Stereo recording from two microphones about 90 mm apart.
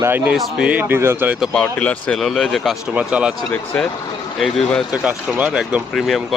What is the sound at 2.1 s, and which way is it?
Speech, 5° left (ahead or behind).